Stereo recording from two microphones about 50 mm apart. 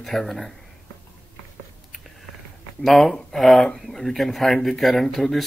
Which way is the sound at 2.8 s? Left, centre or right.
Centre.